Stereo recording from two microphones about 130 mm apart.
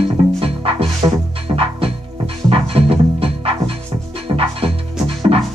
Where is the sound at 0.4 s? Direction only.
45° right (ahead or behind).